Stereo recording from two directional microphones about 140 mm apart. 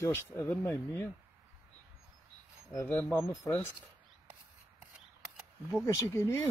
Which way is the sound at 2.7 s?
15° left (ahead or behind).